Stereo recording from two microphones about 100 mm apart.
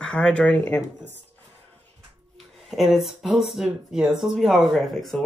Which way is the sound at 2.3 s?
Centre (ahead or behind).